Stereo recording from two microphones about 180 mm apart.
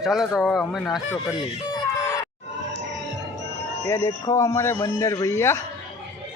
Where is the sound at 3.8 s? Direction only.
15° left (ahead or behind).